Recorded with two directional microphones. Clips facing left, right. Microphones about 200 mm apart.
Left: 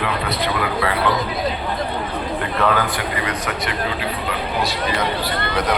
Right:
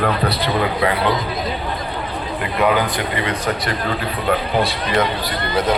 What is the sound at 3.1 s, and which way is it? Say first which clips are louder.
Speech: right 3 dB; 30° right (ahead or behind).